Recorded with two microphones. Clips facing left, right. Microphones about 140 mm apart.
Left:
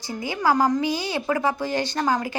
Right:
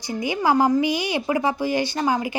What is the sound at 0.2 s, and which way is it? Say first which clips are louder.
A woman's voice: right 2 dB; 15° right (ahead or behind).